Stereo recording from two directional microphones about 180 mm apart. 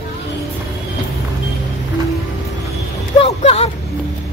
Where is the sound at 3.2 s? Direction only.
35° left (ahead or behind).